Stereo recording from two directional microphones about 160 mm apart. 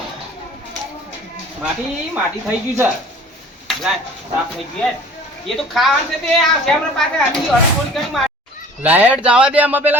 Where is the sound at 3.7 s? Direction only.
Centre (ahead or behind).